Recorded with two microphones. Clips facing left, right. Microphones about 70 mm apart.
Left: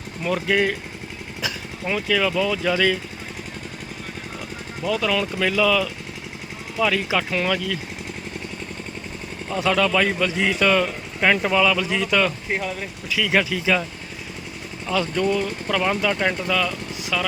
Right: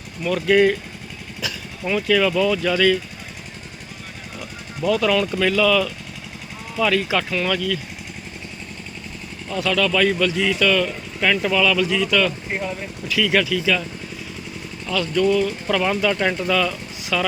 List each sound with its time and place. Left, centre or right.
0.2 s speech: left
1.4 s vehicle: left
1.9 s speech: centre
4.9 s speech: centre
9.5 s speech: left
13.1 s speech: centre
14.8 s speech: left
15.7 s speech: centre